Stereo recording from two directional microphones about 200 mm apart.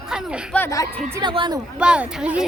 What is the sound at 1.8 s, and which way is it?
Speech, 5° right (ahead or behind).